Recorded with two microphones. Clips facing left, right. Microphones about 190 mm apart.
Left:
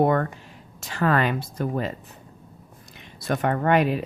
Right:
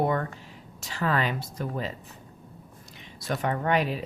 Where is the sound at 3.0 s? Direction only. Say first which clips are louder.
Left 5 dB; 60° left (ahead or behind).